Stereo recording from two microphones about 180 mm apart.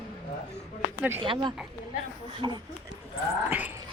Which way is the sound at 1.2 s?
25° right (ahead or behind).